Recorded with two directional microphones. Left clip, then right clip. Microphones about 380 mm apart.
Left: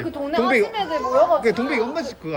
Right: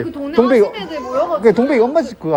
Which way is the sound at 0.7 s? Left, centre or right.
Left.